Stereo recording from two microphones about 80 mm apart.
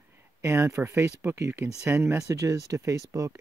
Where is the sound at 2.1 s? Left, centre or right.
Right.